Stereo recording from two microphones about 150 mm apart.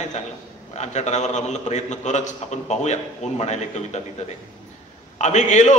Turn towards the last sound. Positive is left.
turn(degrees=50)  # may be behind; listen again after turning